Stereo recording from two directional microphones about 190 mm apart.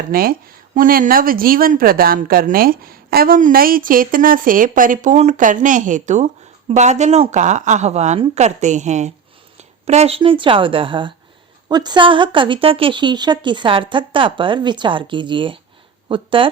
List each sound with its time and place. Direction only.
0.1 s a woman's voice: 50° right (ahead or behind); by 16.5 s 25° right (ahead or behind)